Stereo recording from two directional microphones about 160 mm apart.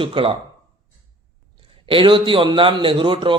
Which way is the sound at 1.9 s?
30° right (ahead or behind).